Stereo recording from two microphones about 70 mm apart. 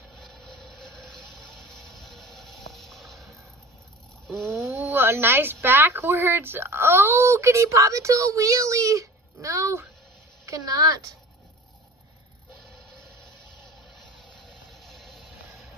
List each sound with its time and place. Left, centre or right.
0.2 s vehicle: centre
0.6 s a sound: centre
4.7 s speech: right
10.4 s a woman's voice: right
14.7 s music: centre